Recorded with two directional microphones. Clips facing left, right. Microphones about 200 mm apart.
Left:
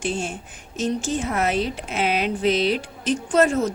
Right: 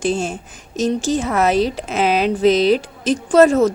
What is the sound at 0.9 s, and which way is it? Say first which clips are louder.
Speech: right 5 dB; 90° right.